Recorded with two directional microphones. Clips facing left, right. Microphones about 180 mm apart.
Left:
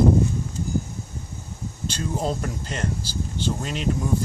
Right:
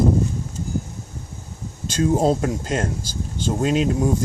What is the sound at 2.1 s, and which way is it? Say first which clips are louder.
Speech: right 8 dB; 40° right (ahead or behind).